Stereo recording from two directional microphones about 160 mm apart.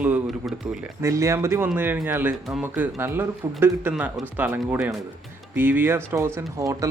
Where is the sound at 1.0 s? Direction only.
20° right (ahead or behind).